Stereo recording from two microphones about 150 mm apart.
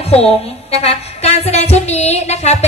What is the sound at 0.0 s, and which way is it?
Music, 40° left (ahead or behind).